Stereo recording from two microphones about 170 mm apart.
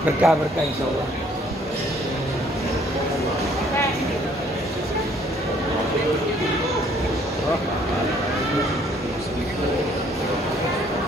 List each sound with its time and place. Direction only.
0.2 s speech: 5° right (ahead or behind)